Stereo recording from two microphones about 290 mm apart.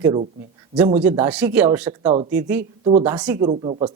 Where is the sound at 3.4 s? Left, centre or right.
Centre.